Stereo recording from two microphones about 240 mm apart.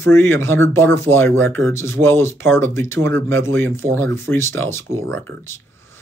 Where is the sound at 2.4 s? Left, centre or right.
Right.